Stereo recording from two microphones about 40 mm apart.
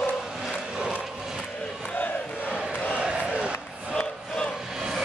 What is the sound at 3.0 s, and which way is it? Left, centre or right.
Crowd, right.